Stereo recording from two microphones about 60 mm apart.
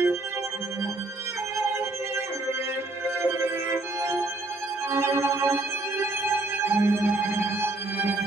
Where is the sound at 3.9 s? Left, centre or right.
Right.